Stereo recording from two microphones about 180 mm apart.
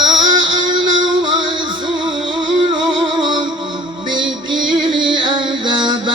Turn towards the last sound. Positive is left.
turn(degrees=-25)  # may be behind; listen again after turning